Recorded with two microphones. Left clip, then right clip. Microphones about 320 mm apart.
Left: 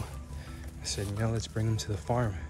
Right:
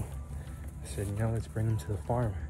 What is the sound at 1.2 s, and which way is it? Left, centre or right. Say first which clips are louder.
Speech: left 2 dB; centre.